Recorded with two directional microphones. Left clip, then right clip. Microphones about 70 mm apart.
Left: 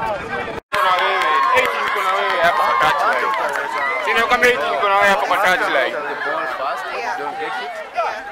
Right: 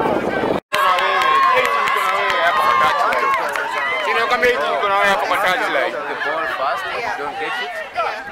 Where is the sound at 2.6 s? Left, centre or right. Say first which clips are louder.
Right 1 dB; right.